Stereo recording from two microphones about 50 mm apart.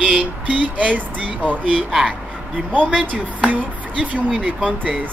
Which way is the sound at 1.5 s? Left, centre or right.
Right.